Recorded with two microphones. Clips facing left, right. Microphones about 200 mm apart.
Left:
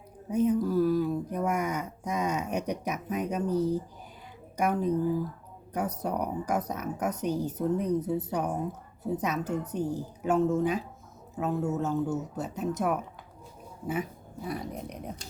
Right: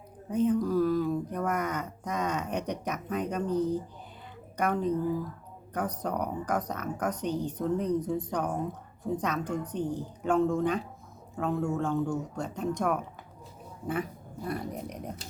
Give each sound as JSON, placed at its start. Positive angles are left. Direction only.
{"t": 0.3, "sound": "a woman's voice", "side_deg": 10}
{"t": 14.4, "sound": "speech", "side_deg": 0}